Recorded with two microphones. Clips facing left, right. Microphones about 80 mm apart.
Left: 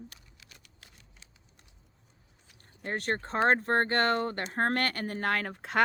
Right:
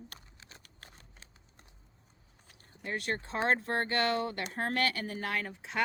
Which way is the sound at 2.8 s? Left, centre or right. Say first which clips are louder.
Left 3 dB; left.